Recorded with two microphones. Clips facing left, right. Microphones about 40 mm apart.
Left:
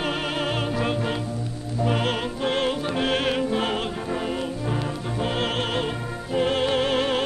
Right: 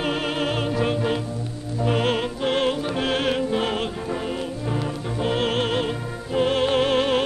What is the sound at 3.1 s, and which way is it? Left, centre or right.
Music, left.